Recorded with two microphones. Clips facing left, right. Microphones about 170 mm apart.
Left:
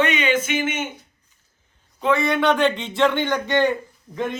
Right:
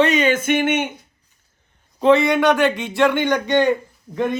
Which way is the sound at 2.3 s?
15° right (ahead or behind).